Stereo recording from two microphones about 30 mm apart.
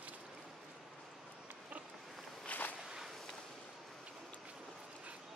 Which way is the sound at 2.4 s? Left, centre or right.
Left.